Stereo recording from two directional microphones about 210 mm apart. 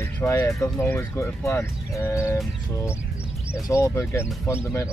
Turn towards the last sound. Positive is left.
turn(degrees=10)  # may be behind; listen again after turning